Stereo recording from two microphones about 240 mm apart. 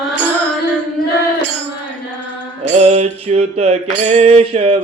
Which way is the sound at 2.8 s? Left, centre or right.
Right.